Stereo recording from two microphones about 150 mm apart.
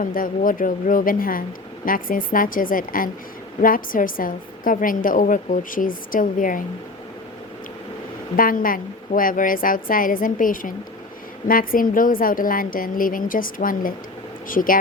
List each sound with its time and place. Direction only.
0.0 s a woman's voice: 65° left (ahead or behind)
8.4 s a woman's voice: 70° left (ahead or behind)